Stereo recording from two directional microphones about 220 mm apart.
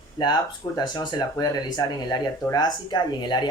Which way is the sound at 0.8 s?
20° left (ahead or behind).